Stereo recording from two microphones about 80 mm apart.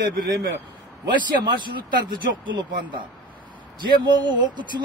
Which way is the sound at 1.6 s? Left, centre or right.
Right.